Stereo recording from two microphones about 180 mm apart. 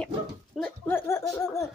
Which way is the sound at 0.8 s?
15° left (ahead or behind).